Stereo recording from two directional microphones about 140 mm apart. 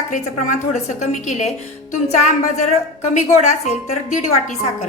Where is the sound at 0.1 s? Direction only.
60° left (ahead or behind).